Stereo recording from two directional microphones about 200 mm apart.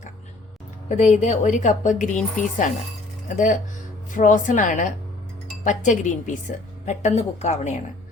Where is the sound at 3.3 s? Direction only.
40° left (ahead or behind).